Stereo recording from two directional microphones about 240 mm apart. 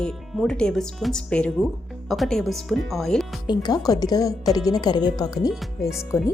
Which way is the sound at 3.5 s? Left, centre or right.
Centre.